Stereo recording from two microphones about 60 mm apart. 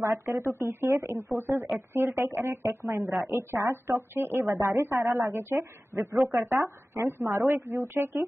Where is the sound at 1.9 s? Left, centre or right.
Right.